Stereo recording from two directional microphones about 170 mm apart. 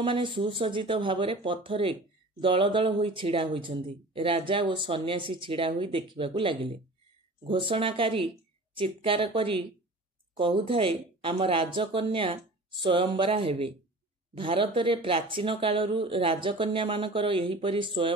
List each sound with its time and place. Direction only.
0.0 s speech: 30° right (ahead or behind)